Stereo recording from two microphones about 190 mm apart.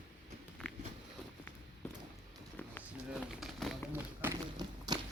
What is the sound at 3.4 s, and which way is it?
Run, centre (ahead or behind).